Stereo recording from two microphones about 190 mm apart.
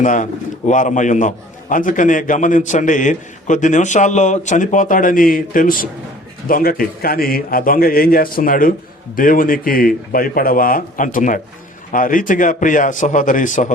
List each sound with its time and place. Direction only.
0.0 s a man's voice: 40° left (ahead or behind)